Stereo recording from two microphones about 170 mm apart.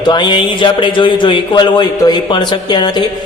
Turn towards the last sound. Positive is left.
turn(degrees=25)  # may be behind; listen again after turning